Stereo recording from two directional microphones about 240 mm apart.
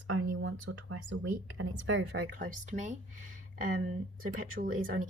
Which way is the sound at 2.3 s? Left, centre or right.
Right.